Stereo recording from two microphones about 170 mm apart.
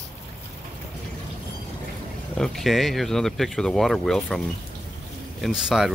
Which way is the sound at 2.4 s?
Centre (ahead or behind).